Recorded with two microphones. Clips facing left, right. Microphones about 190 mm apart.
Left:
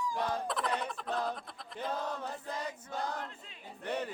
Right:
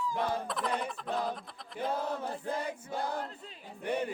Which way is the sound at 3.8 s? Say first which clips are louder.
Right 4 dB; 10° right (ahead or behind).